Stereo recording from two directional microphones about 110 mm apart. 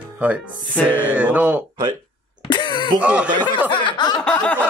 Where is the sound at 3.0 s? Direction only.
10° right (ahead or behind).